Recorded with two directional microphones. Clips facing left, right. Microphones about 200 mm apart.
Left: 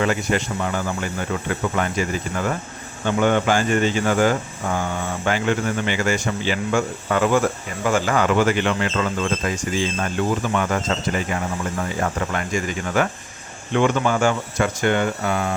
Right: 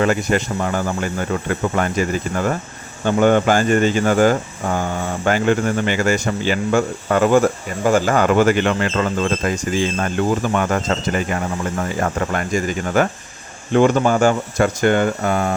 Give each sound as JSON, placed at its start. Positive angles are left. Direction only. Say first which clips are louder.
{"t": 0.0, "sound": "speech", "louder": "right 4 dB", "side_deg": -45}